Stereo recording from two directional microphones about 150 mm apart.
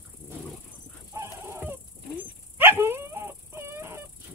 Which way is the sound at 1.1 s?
20° right (ahead or behind).